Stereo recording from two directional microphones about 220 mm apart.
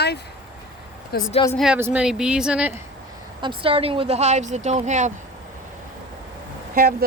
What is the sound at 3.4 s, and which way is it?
Speech, 25° right (ahead or behind).